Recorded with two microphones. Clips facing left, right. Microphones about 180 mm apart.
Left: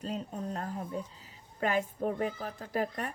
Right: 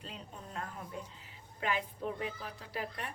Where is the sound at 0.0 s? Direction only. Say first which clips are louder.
Left 11 dB; 40° left (ahead or behind).